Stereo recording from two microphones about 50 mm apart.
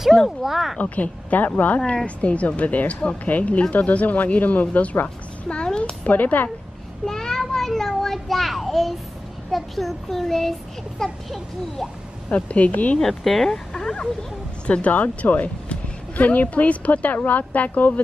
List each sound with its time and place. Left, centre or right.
0.4 s a child's voice: centre
0.7 s a woman's voice: left
5.5 s speech: centre
6.0 s a woman's voice: left
7.1 s a child's voice: centre
12.3 s speech: left
13.0 s speech: centre
14.7 s a woman's voice: left